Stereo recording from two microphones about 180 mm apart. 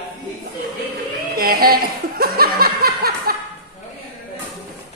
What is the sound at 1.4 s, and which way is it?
Chuckle, 55° right (ahead or behind).